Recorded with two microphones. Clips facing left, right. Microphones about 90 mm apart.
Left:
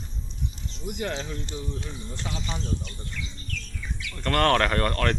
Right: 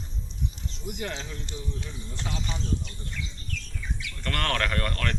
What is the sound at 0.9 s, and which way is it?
Speech, 40° left (ahead or behind).